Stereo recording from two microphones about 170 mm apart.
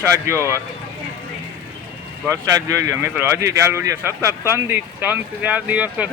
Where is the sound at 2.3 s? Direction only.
20° right (ahead or behind).